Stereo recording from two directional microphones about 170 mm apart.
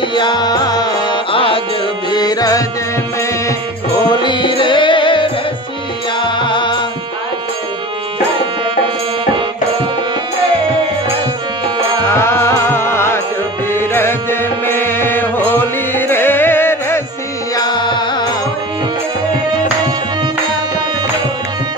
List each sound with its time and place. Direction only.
0.1 s music: 25° left (ahead or behind)
4.1 s music: 25° left (ahead or behind)
12.1 s music: 15° left (ahead or behind)
17.6 s music: 25° left (ahead or behind)